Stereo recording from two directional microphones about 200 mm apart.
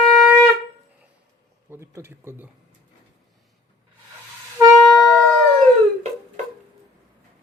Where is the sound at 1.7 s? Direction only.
15° right (ahead or behind).